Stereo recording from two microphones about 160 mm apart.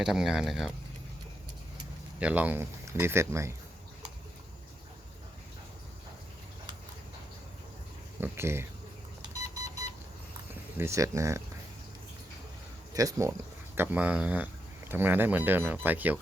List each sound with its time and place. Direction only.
0.0 s speech: 5° right (ahead or behind)
2.1 s speech: 10° right (ahead or behind)
8.2 s speech: 15° right (ahead or behind)
10.5 s speech: 15° right (ahead or behind)
12.9 s speech: 20° right (ahead or behind)